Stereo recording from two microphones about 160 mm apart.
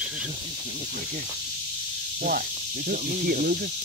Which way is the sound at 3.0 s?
45° right (ahead or behind).